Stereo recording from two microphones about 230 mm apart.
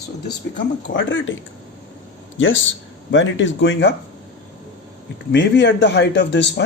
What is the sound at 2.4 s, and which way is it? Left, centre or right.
Speech, left.